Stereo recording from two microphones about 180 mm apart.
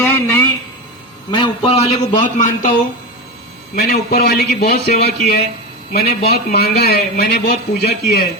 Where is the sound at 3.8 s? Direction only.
60° left (ahead or behind).